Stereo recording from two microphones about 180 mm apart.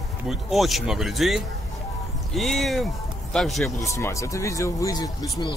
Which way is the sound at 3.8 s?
15° left (ahead or behind).